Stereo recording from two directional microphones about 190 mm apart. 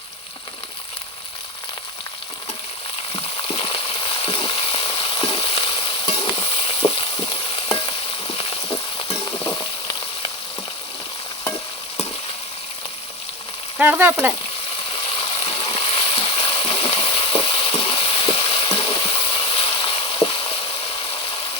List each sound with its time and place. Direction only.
3.1 s frying: 30° left (ahead or behind)
9.0 s frying: 25° left (ahead or behind)
13.7 s frying: 10° right (ahead or behind)
15.2 s water: 25° left (ahead or behind)